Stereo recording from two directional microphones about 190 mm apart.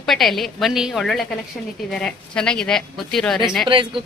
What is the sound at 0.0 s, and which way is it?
A woman's voice, centre (ahead or behind).